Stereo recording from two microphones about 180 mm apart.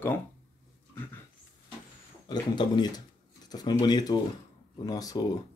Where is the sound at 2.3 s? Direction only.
25° left (ahead or behind).